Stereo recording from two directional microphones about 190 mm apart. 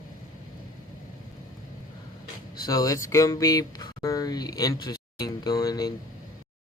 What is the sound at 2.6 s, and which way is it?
Speech, 20° left (ahead or behind).